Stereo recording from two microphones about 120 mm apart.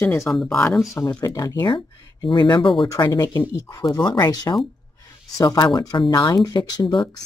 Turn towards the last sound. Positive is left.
turn(degrees=35)  # may be behind; listen again after turning